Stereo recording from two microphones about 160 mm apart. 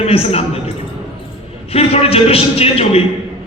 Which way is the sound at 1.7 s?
40° left (ahead or behind).